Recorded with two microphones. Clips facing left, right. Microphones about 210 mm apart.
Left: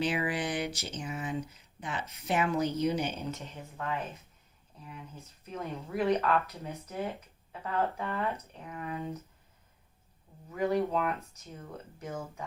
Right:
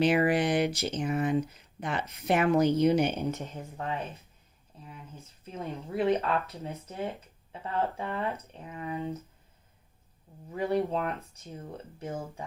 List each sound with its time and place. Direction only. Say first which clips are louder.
0.1 s speech: right 7 dB; 55° right (ahead or behind)
3.3 s speech: right 5 dB; 50° right (ahead or behind)
3.8 s speech: right 1 dB; 30° right (ahead or behind)
5.5 s speech: right 1 dB; 30° right (ahead or behind)
10.5 s speech: even; 30° right (ahead or behind)